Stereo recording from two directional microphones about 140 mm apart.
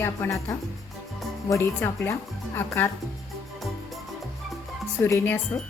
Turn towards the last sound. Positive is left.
turn(degrees=15)  # may be behind; listen again after turning